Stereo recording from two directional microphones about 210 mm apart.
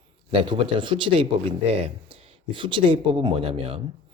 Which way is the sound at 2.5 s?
25° right (ahead or behind).